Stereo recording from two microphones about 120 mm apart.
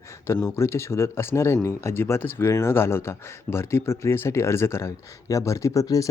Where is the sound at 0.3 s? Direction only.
20° left (ahead or behind).